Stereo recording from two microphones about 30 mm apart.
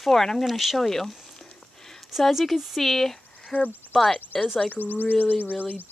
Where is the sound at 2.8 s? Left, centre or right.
Centre.